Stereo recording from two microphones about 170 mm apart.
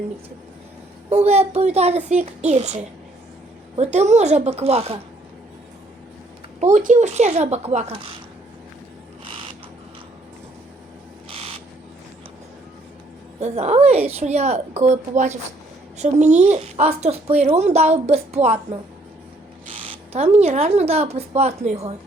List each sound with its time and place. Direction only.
1.1 s speech: 40° right (ahead or behind)
6.6 s speech: 45° right (ahead or behind)
9.2 s a sound: 30° right (ahead or behind)
13.4 s speech: 40° right (ahead or behind)
20.1 s speech: 40° right (ahead or behind)